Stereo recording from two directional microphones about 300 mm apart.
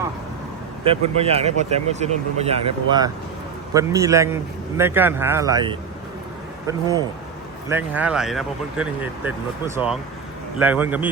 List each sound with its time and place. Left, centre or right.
0.9 s speech: centre